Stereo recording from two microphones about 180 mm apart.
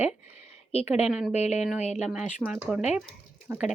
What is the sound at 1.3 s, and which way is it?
Speech, 40° left (ahead or behind).